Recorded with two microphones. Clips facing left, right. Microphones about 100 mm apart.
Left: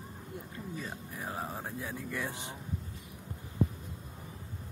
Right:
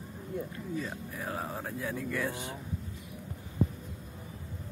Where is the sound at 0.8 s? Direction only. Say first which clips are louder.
Right 3 dB; 25° left (ahead or behind).